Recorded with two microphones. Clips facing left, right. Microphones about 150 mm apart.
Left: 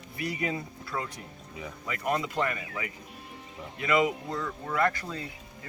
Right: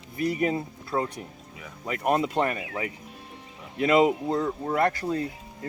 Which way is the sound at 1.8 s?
50° right (ahead or behind).